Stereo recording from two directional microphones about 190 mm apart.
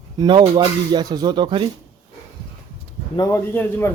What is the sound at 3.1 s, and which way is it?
Speech, 15° left (ahead or behind).